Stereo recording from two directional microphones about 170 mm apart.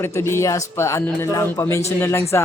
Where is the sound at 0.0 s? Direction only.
15° left (ahead or behind).